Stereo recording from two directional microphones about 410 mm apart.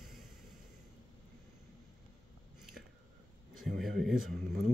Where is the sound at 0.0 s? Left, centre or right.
Centre.